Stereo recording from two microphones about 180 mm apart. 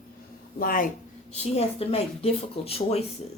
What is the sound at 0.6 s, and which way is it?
Speech, 50° left (ahead or behind).